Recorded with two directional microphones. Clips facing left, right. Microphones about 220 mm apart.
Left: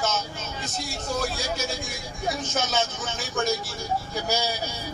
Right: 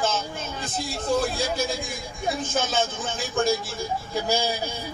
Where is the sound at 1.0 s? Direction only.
55° right (ahead or behind).